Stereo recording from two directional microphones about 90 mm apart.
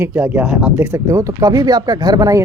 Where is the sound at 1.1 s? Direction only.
35° right (ahead or behind).